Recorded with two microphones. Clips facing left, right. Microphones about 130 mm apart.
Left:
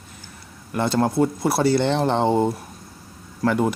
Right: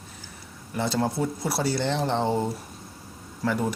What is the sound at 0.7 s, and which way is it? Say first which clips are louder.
Speech: left 5 dB; 55° left (ahead or behind).